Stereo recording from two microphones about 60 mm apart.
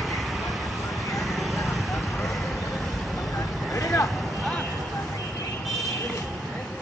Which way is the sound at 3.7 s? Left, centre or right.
Left.